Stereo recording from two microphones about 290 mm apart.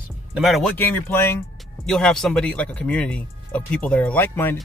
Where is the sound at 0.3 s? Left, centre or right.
Centre.